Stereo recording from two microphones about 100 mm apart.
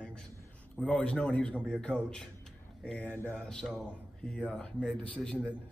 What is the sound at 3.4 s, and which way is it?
Speech, 5° left (ahead or behind).